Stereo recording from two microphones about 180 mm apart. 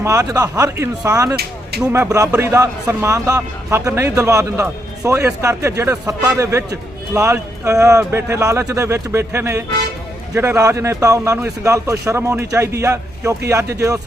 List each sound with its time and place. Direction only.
0.0 s a man's voice: 15° right (ahead or behind)